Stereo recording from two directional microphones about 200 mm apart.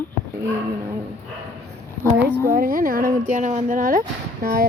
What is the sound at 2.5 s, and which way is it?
Speech, 45° right (ahead or behind).